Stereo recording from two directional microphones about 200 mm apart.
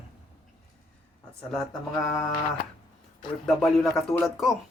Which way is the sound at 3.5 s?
Centre (ahead or behind).